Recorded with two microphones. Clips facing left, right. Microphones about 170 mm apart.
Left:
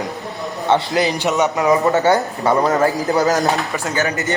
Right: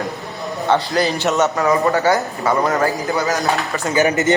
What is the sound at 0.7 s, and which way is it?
A man's voice, 20° left (ahead or behind).